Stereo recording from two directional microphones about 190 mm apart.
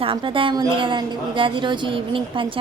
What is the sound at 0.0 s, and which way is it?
A woman's voice, 25° right (ahead or behind).